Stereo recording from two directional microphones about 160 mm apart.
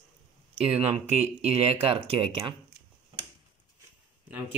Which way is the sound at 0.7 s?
40° right (ahead or behind).